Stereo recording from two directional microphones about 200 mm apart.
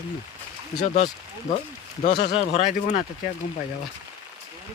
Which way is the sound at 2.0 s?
45° left (ahead or behind).